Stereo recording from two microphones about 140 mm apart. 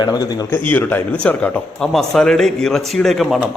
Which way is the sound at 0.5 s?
15° left (ahead or behind).